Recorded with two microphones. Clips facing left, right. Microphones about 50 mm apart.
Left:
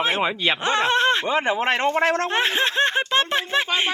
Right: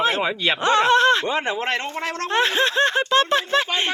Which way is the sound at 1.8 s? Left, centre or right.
Left.